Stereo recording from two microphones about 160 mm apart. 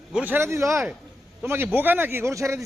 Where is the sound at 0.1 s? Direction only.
10° right (ahead or behind).